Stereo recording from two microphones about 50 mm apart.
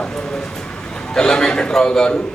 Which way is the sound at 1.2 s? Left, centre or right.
Centre.